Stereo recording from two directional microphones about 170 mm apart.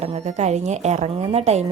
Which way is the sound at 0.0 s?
40° right (ahead or behind).